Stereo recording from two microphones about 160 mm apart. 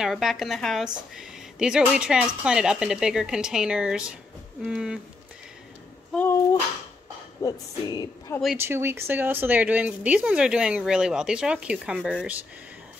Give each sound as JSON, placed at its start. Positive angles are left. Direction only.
{"t": 0.0, "sound": "a woman's voice", "side_deg": 0}
{"t": 6.1, "sound": "speech", "side_deg": 15}
{"t": 7.4, "sound": "speech", "side_deg": 20}
{"t": 8.5, "sound": "speech", "side_deg": -15}